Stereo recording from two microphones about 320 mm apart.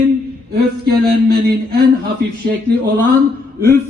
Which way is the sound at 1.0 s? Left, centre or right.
Right.